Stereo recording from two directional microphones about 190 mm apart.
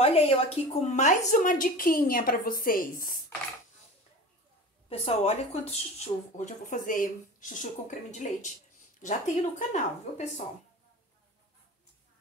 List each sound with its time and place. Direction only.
0.0 s a woman's voice: 30° left (ahead or behind); by 3.2 s 50° left (ahead or behind)
4.8 s speech: 30° left (ahead or behind)